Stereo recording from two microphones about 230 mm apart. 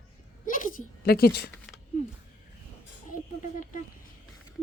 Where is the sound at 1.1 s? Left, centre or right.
Left.